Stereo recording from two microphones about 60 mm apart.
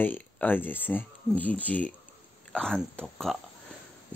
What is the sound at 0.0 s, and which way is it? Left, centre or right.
Speech, left.